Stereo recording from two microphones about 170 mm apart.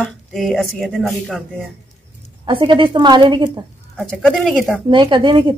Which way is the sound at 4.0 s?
5° left (ahead or behind).